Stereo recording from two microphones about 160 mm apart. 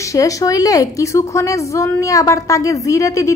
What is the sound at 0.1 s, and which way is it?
A woman's voice, 20° left (ahead or behind).